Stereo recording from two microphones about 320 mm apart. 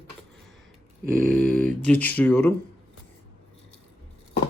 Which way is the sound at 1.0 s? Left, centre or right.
Right.